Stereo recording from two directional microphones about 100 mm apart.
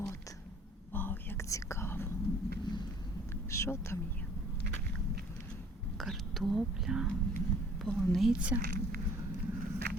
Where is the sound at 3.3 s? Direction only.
30° left (ahead or behind).